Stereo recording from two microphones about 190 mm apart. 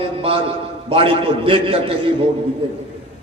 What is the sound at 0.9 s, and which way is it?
A man's voice, 30° right (ahead or behind).